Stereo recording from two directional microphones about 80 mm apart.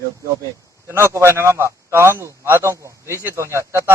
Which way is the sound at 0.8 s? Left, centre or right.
Right.